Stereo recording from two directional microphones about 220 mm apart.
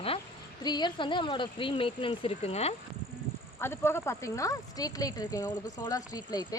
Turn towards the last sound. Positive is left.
turn(degrees=20)  # may be behind; listen again after turning